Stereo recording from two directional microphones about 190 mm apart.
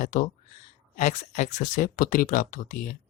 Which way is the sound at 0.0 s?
45° left (ahead or behind).